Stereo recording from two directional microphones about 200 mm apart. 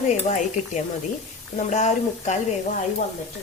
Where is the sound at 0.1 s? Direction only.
35° left (ahead or behind).